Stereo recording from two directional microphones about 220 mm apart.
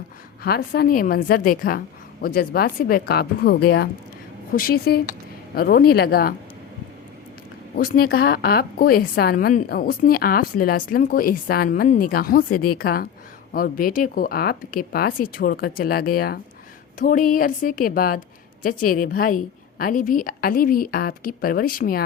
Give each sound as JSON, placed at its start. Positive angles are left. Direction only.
{"t": 0.4, "sound": "speech", "side_deg": 45}
{"t": 7.8, "sound": "a woman's voice", "side_deg": 40}